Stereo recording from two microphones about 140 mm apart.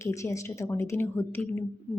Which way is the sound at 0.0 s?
20° left (ahead or behind).